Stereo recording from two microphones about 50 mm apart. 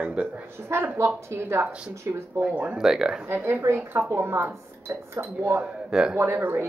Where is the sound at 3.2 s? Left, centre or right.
Right.